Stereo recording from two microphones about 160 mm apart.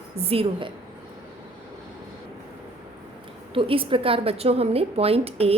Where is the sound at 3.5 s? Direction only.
35° right (ahead or behind).